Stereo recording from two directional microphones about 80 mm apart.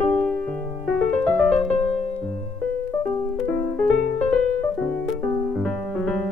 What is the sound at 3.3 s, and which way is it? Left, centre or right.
Music, centre.